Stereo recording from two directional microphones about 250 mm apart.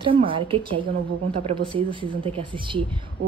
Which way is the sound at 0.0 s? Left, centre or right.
Right.